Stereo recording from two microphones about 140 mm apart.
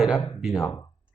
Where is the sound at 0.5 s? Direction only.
20° left (ahead or behind).